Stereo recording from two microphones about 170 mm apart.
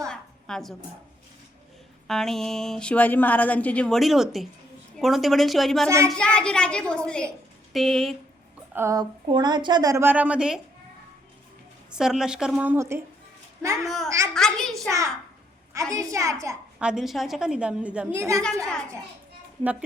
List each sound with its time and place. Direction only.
0.1 s a sound: 5° left (ahead or behind)
2.0 s speech: centre (ahead or behind)
8.7 s a woman's voice: 15° right (ahead or behind)
11.9 s speech: 5° right (ahead or behind)
13.8 s speech: centre (ahead or behind)
14.8 s a woman's voice: 20° right (ahead or behind)
16.8 s speech: centre (ahead or behind)